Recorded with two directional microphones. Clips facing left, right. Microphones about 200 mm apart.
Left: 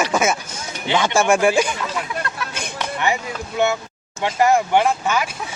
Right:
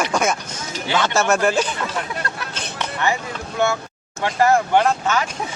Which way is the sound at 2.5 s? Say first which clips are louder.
Left 1 dB; 10° left (ahead or behind).